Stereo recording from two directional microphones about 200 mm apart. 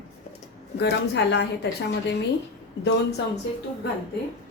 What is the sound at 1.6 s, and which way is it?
Speech, 55° left (ahead or behind).